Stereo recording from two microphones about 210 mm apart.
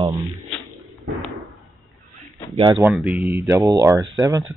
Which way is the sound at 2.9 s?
5° right (ahead or behind).